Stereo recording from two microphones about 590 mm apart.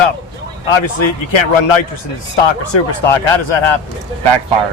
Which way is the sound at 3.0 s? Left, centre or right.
Left.